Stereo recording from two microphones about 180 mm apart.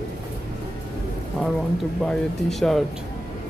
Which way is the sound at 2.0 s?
Centre (ahead or behind).